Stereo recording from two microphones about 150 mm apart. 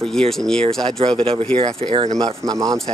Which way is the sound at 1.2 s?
40° right (ahead or behind).